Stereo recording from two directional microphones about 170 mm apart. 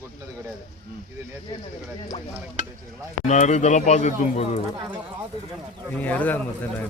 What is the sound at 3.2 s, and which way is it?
Speech, 45° left (ahead or behind).